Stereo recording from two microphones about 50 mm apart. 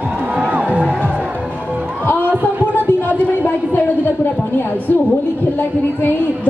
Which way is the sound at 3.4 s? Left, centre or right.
Left.